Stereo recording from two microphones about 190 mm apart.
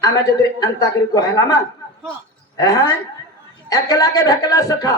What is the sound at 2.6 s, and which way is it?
A woman's voice, 20° left (ahead or behind).